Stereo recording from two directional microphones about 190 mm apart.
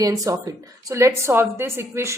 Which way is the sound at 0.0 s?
15° right (ahead or behind).